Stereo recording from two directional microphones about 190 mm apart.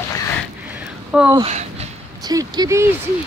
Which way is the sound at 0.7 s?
5° right (ahead or behind).